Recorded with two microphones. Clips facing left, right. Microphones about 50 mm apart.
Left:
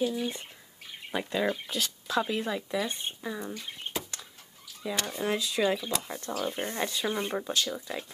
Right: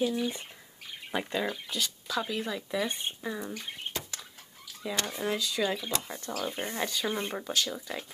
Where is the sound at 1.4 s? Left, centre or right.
Left.